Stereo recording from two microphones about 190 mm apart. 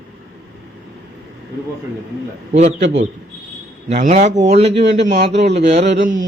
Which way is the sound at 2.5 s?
40° right (ahead or behind).